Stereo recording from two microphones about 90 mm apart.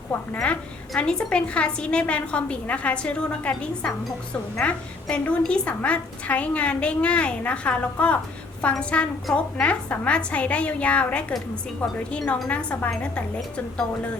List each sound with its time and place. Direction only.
0.3 s a woman's voice: 10° left (ahead or behind)